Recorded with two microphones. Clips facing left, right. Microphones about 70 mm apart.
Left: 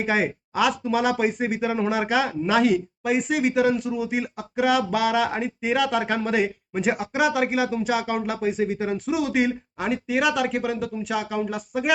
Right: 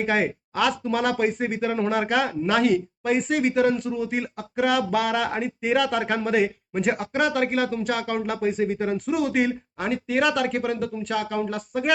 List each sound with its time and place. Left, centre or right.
0.0 s speech: centre